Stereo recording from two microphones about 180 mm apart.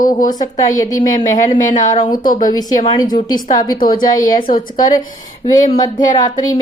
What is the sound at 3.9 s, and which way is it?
Speech, 50° left (ahead or behind).